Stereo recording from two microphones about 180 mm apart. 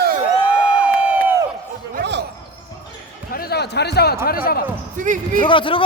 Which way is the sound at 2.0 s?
75° right (ahead or behind).